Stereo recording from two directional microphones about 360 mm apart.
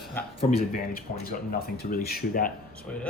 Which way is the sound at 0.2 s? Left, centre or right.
Centre.